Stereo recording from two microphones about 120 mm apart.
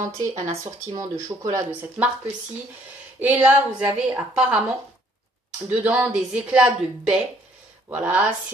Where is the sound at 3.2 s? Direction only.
15° right (ahead or behind).